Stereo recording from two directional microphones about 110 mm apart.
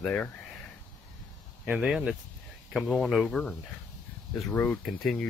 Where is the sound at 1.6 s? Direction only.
10° right (ahead or behind); by 4.8 s 15° left (ahead or behind).